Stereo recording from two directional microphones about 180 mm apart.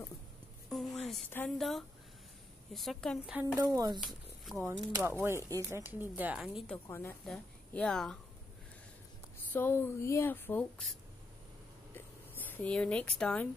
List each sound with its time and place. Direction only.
0.7 s a sound: centre (ahead or behind)
1.5 s a woman's voice: centre (ahead or behind)
3.3 s a woman's voice: 15° right (ahead or behind)
4.5 s a woman's voice: centre (ahead or behind)
4.9 s speech: 10° right (ahead or behind)
6.9 s speech: 15° left (ahead or behind)
9.5 s speech: 10° left (ahead or behind)
11.9 s a sound: 10° left (ahead or behind)